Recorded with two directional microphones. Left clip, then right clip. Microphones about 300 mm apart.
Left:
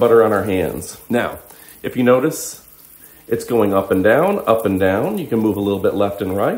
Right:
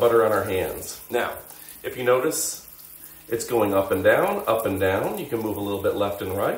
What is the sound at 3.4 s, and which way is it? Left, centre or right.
Speech, centre.